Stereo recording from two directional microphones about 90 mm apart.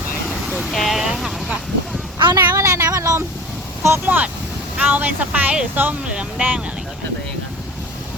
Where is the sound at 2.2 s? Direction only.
50° right (ahead or behind).